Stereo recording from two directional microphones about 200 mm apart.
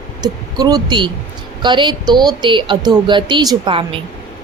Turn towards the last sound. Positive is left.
turn(degrees=-25)  # may be behind; listen again after turning